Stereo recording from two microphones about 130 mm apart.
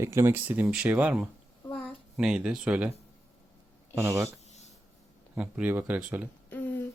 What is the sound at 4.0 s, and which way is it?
Speech, 15° right (ahead or behind).